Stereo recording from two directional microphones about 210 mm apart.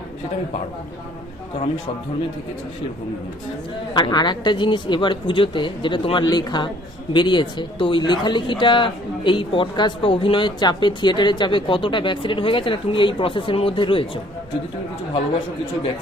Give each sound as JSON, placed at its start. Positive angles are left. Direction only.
{"t": 3.9, "sound": "speech", "side_deg": 20}